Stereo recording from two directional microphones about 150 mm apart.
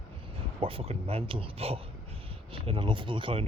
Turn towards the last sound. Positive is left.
turn(degrees=-35)  # may be behind; listen again after turning